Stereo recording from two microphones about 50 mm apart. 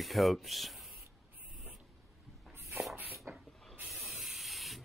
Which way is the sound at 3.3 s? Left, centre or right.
Right.